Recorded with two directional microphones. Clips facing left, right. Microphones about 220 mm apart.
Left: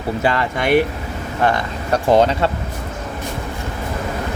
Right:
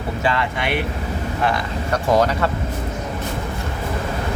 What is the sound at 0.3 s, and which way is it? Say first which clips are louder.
Speech: left 2 dB; 40° left (ahead or behind).